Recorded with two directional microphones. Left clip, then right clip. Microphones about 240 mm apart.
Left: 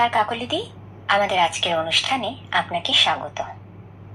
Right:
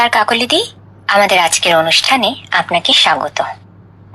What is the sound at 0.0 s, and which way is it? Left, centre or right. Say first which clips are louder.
A woman's voice: right 8 dB; right.